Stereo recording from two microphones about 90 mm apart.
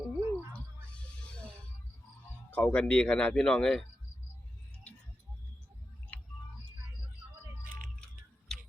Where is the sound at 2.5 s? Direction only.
20° left (ahead or behind).